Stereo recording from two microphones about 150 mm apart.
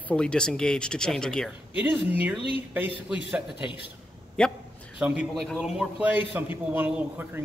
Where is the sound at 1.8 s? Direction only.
10° right (ahead or behind).